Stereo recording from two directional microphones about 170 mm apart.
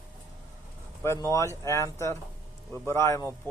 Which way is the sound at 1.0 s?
15° left (ahead or behind).